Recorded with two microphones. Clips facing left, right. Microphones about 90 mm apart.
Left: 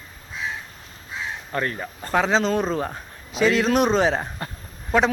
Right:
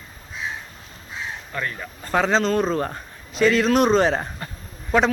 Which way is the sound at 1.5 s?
35° left (ahead or behind).